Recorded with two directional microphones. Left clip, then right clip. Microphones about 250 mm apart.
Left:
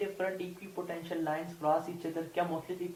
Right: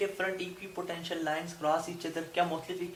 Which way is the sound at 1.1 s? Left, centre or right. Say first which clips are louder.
Right 1 dB; right.